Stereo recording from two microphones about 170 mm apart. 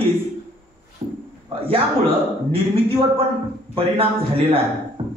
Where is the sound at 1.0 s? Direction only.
35° right (ahead or behind).